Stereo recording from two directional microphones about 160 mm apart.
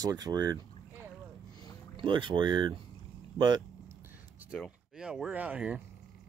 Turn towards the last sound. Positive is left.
turn(degrees=-5)  # may be behind; listen again after turning